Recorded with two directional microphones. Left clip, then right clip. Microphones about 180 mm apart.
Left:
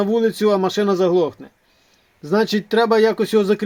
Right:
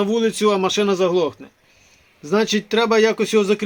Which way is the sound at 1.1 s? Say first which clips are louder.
Left 2 dB; 55° left (ahead or behind).